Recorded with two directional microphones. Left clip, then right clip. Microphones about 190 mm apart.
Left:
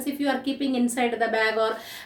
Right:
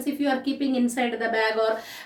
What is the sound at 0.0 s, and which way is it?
A woman's voice, 15° left (ahead or behind).